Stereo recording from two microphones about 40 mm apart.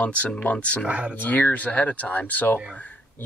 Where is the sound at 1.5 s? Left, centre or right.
Left.